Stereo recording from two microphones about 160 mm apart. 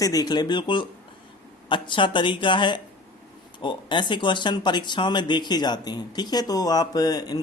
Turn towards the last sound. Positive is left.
turn(degrees=25)  # may be behind; listen again after turning